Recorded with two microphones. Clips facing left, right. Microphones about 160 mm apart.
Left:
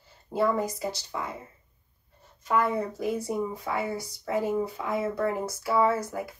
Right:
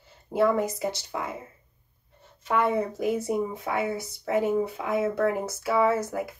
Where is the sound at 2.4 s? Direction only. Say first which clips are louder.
Right 2 dB; 25° right (ahead or behind).